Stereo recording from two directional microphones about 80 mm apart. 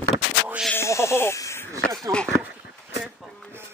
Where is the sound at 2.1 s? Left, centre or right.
Centre.